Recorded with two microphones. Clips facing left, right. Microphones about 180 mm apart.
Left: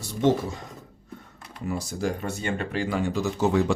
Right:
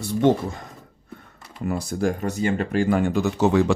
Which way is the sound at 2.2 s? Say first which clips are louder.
Right 6 dB; 40° right (ahead or behind).